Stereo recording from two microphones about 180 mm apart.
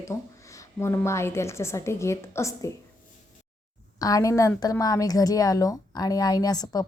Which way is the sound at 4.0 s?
20° left (ahead or behind).